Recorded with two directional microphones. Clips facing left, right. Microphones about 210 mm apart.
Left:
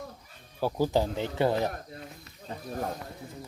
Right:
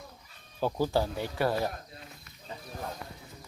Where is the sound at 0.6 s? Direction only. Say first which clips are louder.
Left 2 dB; 15° left (ahead or behind).